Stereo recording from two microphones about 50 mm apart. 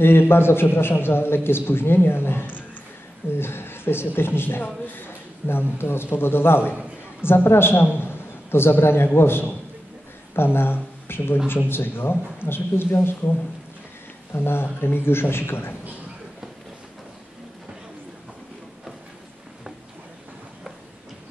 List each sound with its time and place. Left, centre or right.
0.0 s a man's voice: left
6.7 s a sound: right
7.2 s a man's voice: left
14.3 s a man's voice: left